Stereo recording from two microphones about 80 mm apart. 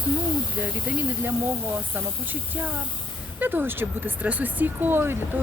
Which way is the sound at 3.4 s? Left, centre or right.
Right.